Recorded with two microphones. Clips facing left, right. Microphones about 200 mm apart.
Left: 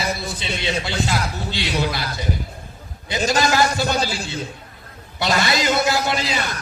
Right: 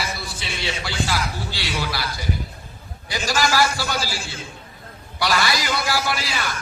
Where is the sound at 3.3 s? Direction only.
20° left (ahead or behind).